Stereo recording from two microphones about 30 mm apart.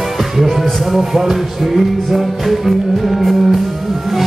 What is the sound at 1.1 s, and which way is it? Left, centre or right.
Music, centre.